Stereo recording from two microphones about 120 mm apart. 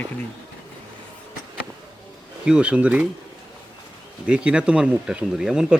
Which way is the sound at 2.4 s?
10° right (ahead or behind).